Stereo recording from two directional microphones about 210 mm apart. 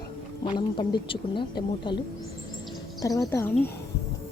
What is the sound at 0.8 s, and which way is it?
Speech, 25° left (ahead or behind).